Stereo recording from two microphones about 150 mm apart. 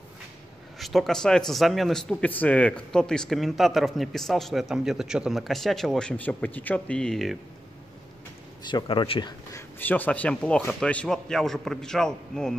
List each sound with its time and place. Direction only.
0.7 s speech: centre (ahead or behind)
8.6 s speech: 30° left (ahead or behind)
9.5 s speech: 15° left (ahead or behind)